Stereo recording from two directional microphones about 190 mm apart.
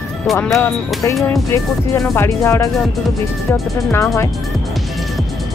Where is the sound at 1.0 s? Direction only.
15° left (ahead or behind).